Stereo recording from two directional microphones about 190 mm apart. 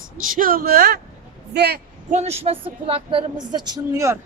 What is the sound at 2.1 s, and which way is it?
A woman's voice, 35° right (ahead or behind).